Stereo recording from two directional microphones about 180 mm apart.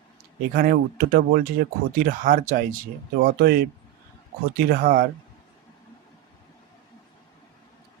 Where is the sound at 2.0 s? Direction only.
50° right (ahead or behind).